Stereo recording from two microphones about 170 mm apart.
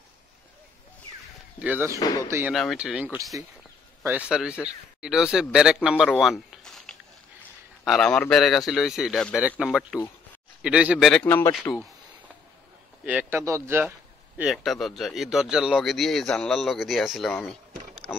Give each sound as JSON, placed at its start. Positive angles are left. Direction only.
{"t": 1.6, "sound": "a man's voice", "side_deg": -10}
{"t": 2.0, "sound": "speech", "side_deg": 20}
{"t": 2.2, "sound": "a man's voice", "side_deg": -15}
{"t": 2.5, "sound": "a man's voice", "side_deg": 0}
{"t": 6.0, "sound": "a sound", "side_deg": 0}
{"t": 7.8, "sound": "speech", "side_deg": 0}
{"t": 11.2, "sound": "speech", "side_deg": 10}
{"t": 13.0, "sound": "speech", "side_deg": -10}
{"t": 17.3, "sound": "rowboat", "side_deg": 5}